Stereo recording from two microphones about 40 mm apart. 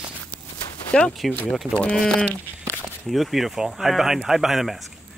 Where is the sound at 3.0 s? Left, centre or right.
Centre.